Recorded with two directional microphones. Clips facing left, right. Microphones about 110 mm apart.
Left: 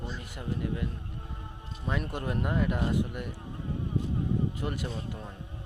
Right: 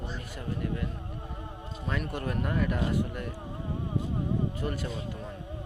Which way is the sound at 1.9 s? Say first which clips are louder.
Even; 20° left (ahead or behind).